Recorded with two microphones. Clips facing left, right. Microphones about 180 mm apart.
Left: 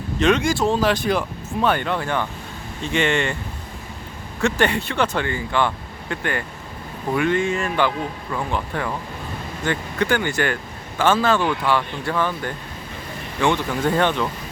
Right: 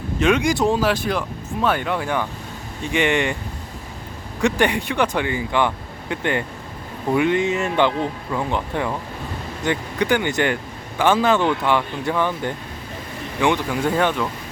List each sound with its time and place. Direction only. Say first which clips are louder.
0.2 s speech: even; 10° right (ahead or behind)
0.8 s speech: left 1 dB; 5° right (ahead or behind)
4.4 s speech: right 1 dB; 15° right (ahead or behind)